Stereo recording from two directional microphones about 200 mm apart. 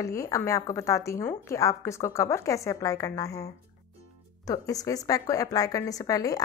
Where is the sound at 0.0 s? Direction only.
15° left (ahead or behind).